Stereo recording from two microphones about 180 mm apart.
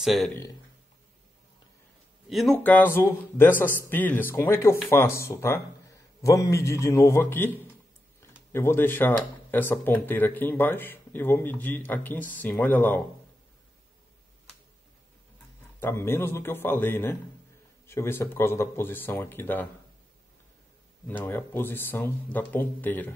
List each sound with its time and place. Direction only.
0.0 s speech: centre (ahead or behind)
2.2 s speech: centre (ahead or behind)
15.8 s speech: 15° left (ahead or behind)
21.1 s speech: 10° left (ahead or behind)